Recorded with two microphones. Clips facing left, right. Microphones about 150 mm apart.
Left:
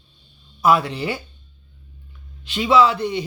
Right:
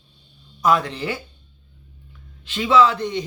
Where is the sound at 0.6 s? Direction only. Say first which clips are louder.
Left 2 dB; 10° left (ahead or behind).